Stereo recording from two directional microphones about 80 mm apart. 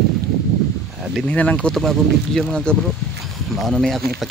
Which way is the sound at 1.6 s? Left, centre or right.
Centre.